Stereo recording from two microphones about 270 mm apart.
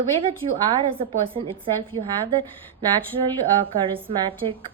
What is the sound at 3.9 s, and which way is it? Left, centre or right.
Speech, centre.